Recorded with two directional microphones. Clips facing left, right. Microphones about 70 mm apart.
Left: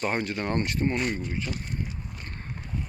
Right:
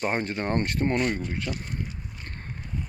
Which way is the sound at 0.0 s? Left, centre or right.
Right.